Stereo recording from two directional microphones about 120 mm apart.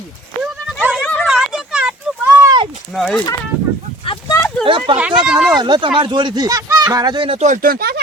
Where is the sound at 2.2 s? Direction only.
25° right (ahead or behind).